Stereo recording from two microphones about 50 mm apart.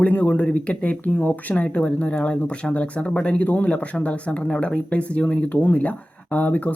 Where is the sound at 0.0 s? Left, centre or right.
Left.